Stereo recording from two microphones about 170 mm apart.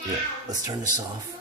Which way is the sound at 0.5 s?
20° right (ahead or behind).